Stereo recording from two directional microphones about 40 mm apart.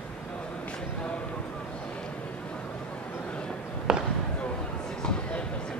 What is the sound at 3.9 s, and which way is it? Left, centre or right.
Basketball bounce, centre.